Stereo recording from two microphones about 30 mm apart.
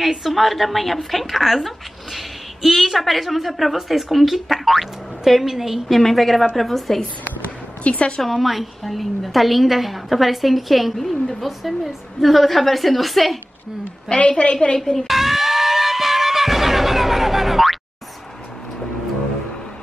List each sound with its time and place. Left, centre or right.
0.0 s a woman's voice: centre
0.3 s a woman's voice: centre
5.9 s a woman's voice: centre
7.8 s a woman's voice: left
8.2 s a woman's voice: centre
14.1 s a woman's voice: left
14.8 s speech: centre
15.0 s music: centre